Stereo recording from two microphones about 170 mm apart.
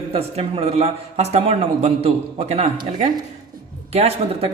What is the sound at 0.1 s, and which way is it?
Speech, 35° right (ahead or behind).